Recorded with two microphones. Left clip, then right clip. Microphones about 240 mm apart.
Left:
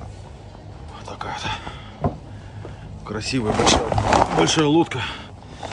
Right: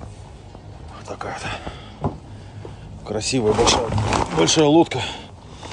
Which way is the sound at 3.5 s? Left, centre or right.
Centre.